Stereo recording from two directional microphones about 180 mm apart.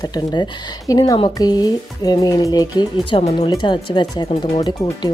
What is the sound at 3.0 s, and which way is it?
A woman's voice, 35° left (ahead or behind).